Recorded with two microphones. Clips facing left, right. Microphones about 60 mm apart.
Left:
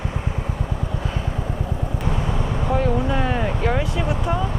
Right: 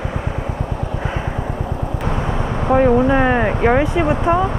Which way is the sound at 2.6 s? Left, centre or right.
Right.